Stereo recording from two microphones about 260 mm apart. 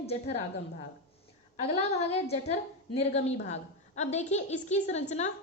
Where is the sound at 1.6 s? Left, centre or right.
Left.